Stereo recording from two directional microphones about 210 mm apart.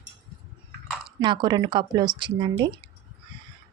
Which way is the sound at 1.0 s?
20° right (ahead or behind).